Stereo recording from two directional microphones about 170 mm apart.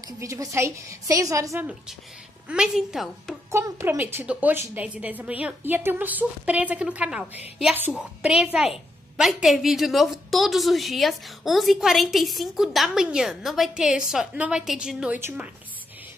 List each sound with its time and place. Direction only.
0.2 s a woman's voice: 20° right (ahead or behind); by 3.3 s centre (ahead or behind)
3.5 s a woman's voice: 15° right (ahead or behind)